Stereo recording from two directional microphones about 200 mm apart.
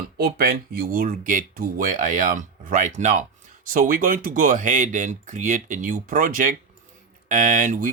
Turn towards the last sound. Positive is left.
turn(degrees=-40)  # may be behind; listen again after turning